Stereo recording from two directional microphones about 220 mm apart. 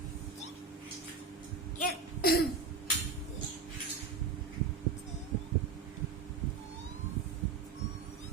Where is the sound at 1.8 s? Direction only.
45° left (ahead or behind).